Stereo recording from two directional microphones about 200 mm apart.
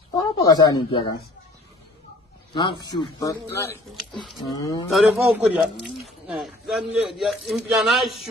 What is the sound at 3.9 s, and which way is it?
Speech, centre (ahead or behind).